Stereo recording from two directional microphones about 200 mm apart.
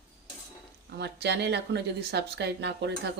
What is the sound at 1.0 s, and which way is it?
Speech, 55° right (ahead or behind).